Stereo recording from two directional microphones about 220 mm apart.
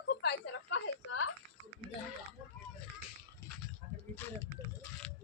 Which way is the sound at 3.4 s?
10° left (ahead or behind).